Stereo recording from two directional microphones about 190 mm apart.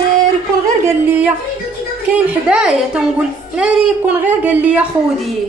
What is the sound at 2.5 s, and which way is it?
A woman's voice, 5° right (ahead or behind).